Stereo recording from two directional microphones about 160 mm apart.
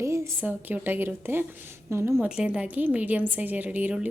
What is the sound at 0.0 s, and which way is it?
A woman's voice, 15° right (ahead or behind).